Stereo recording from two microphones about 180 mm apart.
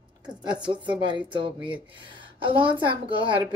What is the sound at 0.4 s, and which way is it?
Speech, 25° right (ahead or behind).